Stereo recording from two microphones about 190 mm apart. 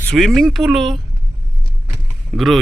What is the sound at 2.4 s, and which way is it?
Speech, centre (ahead or behind).